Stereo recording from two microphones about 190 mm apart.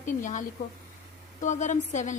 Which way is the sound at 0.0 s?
40° left (ahead or behind).